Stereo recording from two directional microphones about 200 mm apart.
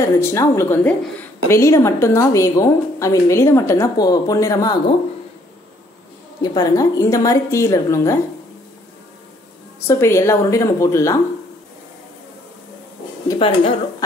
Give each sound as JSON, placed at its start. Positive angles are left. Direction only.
{"t": 0.0, "sound": "a woman's voice", "side_deg": 15}
{"t": 6.4, "sound": "a woman's voice", "side_deg": 20}
{"t": 9.8, "sound": "a woman's voice", "side_deg": 15}
{"t": 13.3, "sound": "speech", "side_deg": 25}